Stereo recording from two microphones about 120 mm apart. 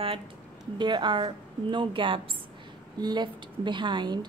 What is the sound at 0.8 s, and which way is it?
A woman's voice, 40° right (ahead or behind).